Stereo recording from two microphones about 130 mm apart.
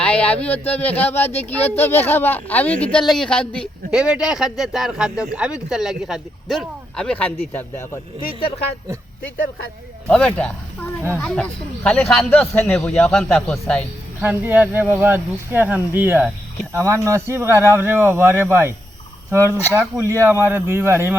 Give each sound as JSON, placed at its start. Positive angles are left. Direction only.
{"t": 0.0, "sound": "a sound", "side_deg": 10}
{"t": 0.4, "sound": "speech", "side_deg": 15}
{"t": 3.9, "sound": "speech", "side_deg": -5}
{"t": 10.1, "sound": "speech", "side_deg": 10}
{"t": 14.2, "sound": "speech", "side_deg": -10}